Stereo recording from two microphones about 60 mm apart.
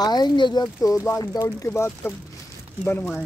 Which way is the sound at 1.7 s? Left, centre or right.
Left.